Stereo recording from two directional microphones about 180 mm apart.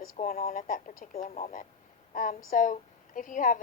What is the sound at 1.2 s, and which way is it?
A woman's voice, 35° left (ahead or behind).